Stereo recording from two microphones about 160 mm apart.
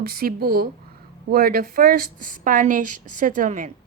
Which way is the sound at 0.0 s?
65° right (ahead or behind).